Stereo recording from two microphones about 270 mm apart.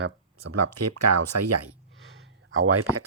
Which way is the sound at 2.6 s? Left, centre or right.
Right.